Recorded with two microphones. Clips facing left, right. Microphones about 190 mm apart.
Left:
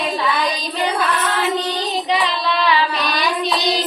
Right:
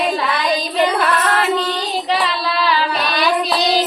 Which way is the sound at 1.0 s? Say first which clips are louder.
Right 3 dB; 60° right (ahead or behind).